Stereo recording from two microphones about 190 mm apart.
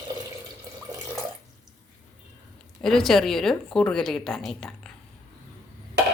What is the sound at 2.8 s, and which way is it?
A woman's voice, centre (ahead or behind).